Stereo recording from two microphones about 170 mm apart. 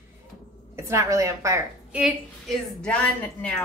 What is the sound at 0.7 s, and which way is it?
A woman's voice, 15° right (ahead or behind).